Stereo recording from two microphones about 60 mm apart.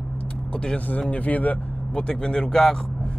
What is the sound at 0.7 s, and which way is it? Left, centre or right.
Speech, left.